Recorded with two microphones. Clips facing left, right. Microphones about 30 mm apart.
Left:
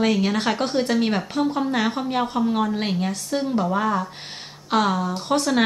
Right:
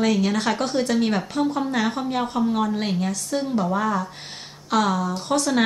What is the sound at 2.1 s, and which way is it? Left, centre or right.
Speech, centre.